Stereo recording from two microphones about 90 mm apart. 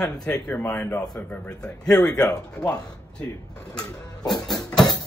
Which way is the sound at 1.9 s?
10° left (ahead or behind).